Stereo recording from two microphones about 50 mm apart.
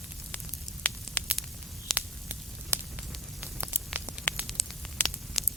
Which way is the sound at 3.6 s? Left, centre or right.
Right.